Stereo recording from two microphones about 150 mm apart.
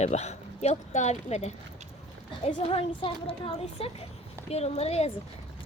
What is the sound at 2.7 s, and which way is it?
A woman's voice, 35° left (ahead or behind).